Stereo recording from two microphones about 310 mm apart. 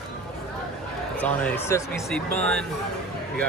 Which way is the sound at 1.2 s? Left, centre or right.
Centre.